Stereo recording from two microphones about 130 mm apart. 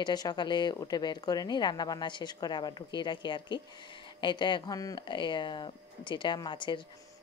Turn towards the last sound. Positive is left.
turn(degrees=40)  # may be behind; listen again after turning